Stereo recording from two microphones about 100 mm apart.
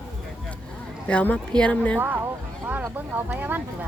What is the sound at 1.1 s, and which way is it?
Speech, 10° left (ahead or behind).